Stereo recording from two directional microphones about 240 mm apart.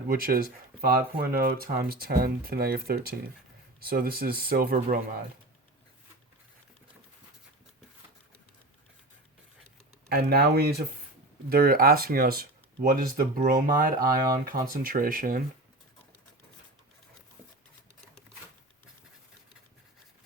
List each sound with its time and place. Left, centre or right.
0.1 s speech: right
10.1 s speech: right